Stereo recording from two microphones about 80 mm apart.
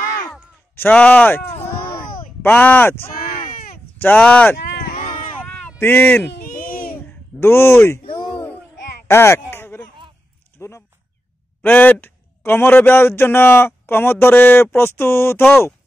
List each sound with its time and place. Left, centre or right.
0.7 s a man's voice: centre
2.4 s a man's voice: left
4.2 s speech: centre
5.4 s a sound: left
5.8 s a man's voice: left
7.3 s speech: left
9.1 s speech: left
9.5 s a sound: left
11.6 s a man's voice: left